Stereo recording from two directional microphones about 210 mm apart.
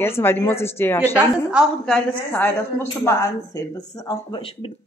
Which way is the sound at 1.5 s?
Centre (ahead or behind).